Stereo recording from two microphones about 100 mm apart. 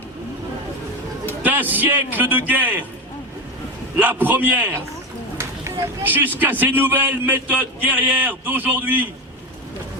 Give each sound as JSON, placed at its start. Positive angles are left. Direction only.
{"t": 1.4, "sound": "a man's voice", "side_deg": -15}
{"t": 3.9, "sound": "a man's voice", "side_deg": -20}
{"t": 5.4, "sound": "a sound", "side_deg": -25}
{"t": 6.4, "sound": "a man's voice", "side_deg": -20}